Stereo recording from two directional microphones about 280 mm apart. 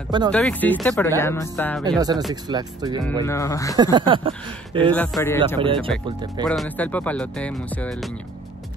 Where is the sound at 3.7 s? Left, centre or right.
Centre.